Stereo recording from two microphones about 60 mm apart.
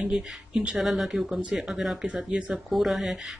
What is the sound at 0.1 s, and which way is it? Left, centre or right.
Speech, centre.